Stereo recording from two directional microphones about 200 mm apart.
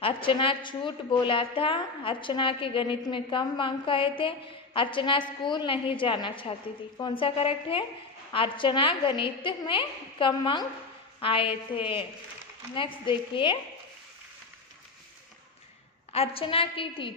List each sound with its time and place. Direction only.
0.0 s a woman's voice: 25° left (ahead or behind)
16.1 s a woman's voice: 30° left (ahead or behind)